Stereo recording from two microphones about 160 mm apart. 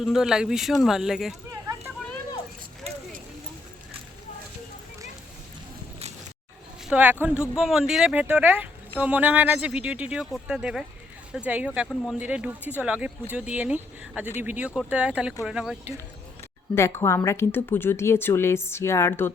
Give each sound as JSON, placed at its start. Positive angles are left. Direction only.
{"t": 0.0, "sound": "speech", "side_deg": -5}
{"t": 2.9, "sound": "a sound", "side_deg": -40}
{"t": 6.8, "sound": "speech", "side_deg": -10}
{"t": 16.7, "sound": "a woman's voice", "side_deg": 15}